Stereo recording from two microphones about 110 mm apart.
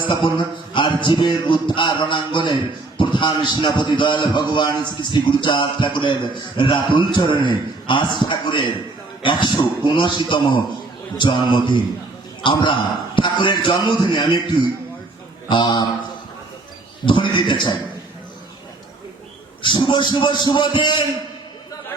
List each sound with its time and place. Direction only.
0.0 s a man's voice: 50° left (ahead or behind)
15.4 s a man's voice: 45° left (ahead or behind)
17.1 s a man's voice: 50° left (ahead or behind)
19.6 s a man's voice: 45° left (ahead or behind)